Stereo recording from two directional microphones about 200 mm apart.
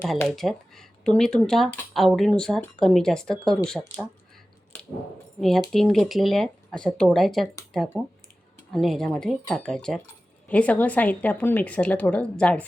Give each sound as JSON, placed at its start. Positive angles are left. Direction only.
{"t": 0.0, "sound": "speech", "side_deg": 5}
{"t": 5.4, "sound": "a woman's voice", "side_deg": 0}